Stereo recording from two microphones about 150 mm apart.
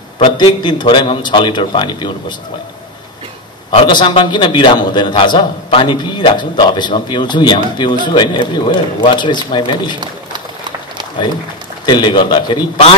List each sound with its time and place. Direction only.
0.2 s a man's voice: 30° left (ahead or behind)
3.8 s a man's voice: 30° left (ahead or behind)
11.8 s a man's voice: 30° left (ahead or behind)